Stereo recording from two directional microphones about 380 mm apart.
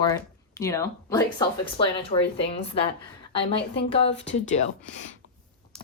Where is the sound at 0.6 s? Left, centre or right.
Centre.